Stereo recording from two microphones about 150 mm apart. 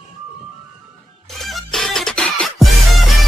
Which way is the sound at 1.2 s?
Centre (ahead or behind).